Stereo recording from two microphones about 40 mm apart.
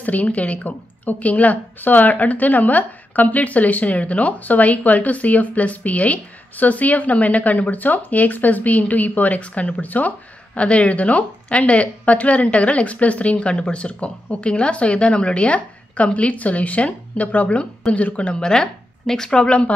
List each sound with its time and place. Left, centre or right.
0.0 s a woman's voice: left
18.4 s speech: centre
19.3 s speech: left